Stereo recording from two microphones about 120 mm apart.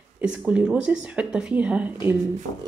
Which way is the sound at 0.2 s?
10° right (ahead or behind).